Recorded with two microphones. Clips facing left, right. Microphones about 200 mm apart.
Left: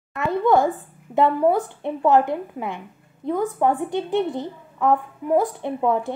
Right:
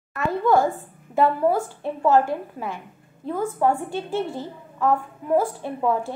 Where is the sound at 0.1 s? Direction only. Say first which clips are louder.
Left 1 dB; 20° left (ahead or behind).